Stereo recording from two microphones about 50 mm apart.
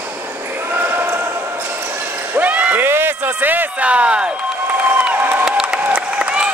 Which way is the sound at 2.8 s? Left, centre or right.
Right.